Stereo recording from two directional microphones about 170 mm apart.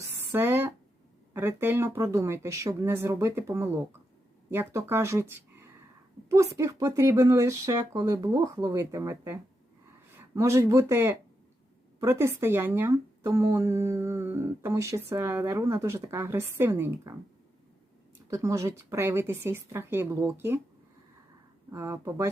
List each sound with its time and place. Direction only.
0.3 s speech: 15° right (ahead or behind)
18.3 s speech: 20° right (ahead or behind)
21.7 s speech: 15° right (ahead or behind)